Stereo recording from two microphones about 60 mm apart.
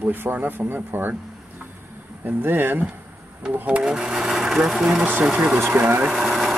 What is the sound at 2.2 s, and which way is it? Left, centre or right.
Speech, right.